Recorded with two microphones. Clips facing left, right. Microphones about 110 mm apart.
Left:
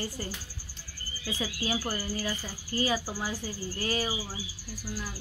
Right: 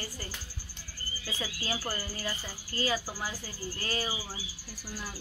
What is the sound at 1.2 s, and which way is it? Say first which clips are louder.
Speech: left 4 dB; 15° left (ahead or behind).